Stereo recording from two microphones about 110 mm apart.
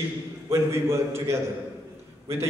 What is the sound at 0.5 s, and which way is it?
Speech, 25° right (ahead or behind).